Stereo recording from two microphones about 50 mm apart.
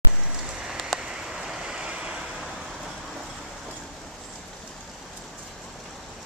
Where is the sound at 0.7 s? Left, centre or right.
Centre; by 2.1 s right.